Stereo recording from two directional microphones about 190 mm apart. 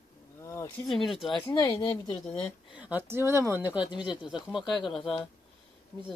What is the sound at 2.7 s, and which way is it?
Speech, 5° right (ahead or behind).